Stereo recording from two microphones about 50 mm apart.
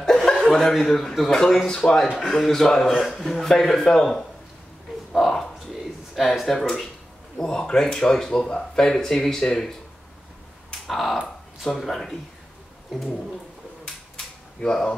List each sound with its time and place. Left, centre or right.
0.0 s chuckle: centre
0.7 s speech: centre
2.3 s speech: centre
5.1 s a sound: centre
7.3 s speech: centre
10.7 s a sound: centre
11.6 s speech: centre
12.9 s speech: centre
13.8 s cap gun: centre